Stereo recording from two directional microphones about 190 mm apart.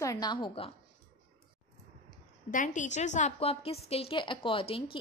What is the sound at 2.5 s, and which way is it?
A woman's voice, 40° left (ahead or behind).